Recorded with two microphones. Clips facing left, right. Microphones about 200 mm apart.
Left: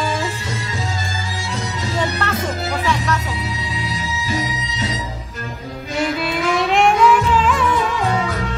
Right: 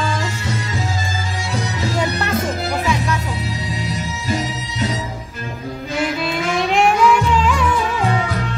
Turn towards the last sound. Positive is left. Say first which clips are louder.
# even
turn(degrees=0)  # may be behind; listen again after turning